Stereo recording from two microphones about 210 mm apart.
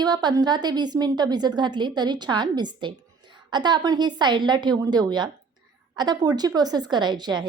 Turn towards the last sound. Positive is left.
turn(degrees=-20)  # may be behind; listen again after turning